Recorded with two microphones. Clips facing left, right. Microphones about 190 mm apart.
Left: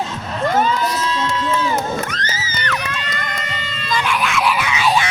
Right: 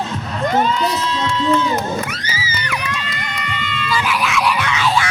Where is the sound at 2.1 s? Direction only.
10° right (ahead or behind).